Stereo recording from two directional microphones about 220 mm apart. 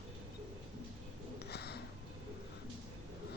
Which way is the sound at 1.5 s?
50° left (ahead or behind).